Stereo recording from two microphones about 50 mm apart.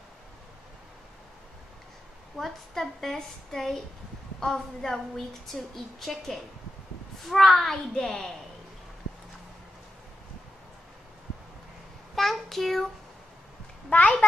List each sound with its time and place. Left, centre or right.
2.3 s a woman's voice: centre
12.2 s child singing: centre
13.8 s a child's voice: left